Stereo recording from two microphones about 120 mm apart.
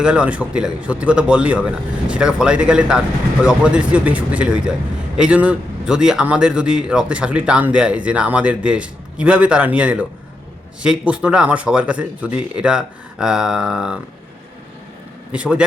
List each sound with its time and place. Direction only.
0.0 s a man's voice: 10° right (ahead or behind)
15.3 s a man's voice: 10° right (ahead or behind)